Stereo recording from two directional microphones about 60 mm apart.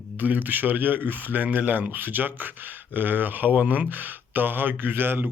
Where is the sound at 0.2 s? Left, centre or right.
Right.